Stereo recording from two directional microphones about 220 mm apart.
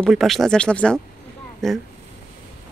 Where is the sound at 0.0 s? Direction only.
Centre (ahead or behind).